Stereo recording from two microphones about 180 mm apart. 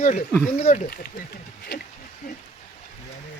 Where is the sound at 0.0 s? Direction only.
45° left (ahead or behind).